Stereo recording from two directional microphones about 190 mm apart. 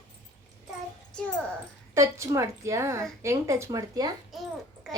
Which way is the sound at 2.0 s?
15° right (ahead or behind).